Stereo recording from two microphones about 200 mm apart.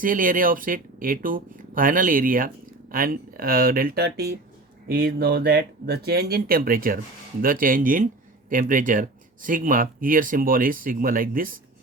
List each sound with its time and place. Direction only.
0.0 s speech: 45° right (ahead or behind)